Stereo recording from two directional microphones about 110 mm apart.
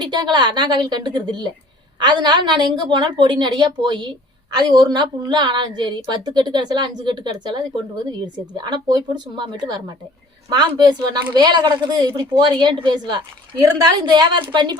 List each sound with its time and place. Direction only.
0.0 s a woman's voice: 40° right (ahead or behind)